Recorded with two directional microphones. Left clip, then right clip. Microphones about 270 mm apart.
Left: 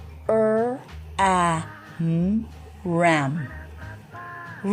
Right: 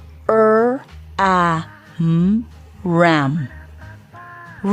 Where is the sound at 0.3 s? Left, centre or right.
Right.